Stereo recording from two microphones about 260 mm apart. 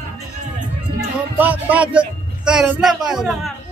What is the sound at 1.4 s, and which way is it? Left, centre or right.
Speech, centre.